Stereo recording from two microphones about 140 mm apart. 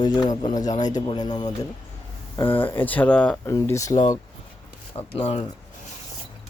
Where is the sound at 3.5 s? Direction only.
20° left (ahead or behind).